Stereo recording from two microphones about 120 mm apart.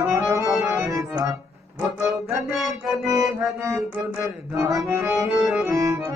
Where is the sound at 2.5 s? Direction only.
Centre (ahead or behind).